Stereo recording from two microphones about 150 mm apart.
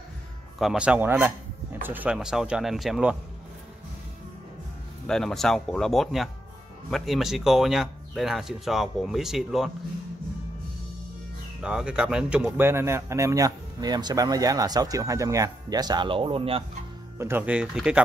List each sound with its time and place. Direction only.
0.6 s speech: 5° right (ahead or behind)
5.0 s speech: 5° left (ahead or behind)
11.6 s speech: 5° right (ahead or behind)
12.5 s speech: 15° right (ahead or behind); by 16.6 s 40° right (ahead or behind)
17.2 s speech: 15° right (ahead or behind)